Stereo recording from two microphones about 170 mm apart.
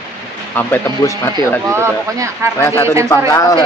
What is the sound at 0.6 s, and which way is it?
Speech, 15° left (ahead or behind).